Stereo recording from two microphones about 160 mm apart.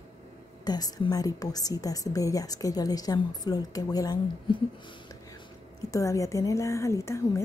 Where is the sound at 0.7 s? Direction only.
25° left (ahead or behind).